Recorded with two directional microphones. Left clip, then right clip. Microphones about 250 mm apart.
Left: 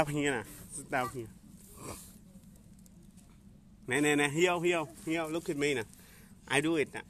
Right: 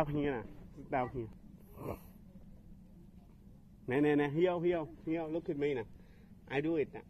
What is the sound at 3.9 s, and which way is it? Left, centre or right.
A man's voice, centre.